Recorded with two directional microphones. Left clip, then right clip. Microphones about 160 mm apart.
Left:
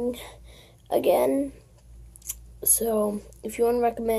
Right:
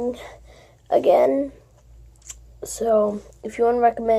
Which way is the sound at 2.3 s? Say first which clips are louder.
Left 3 dB; 15° left (ahead or behind).